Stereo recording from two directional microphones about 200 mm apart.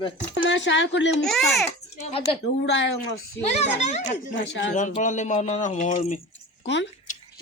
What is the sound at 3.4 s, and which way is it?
Speech, 35° left (ahead or behind).